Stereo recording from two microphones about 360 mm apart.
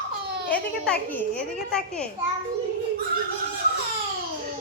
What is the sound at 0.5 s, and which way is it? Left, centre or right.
A child's voice, centre.